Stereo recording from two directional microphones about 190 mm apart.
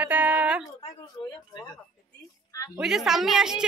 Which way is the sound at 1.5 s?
20° left (ahead or behind).